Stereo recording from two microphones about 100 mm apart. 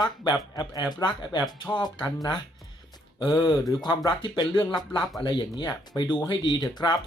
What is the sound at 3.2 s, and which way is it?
Speech, 45° left (ahead or behind).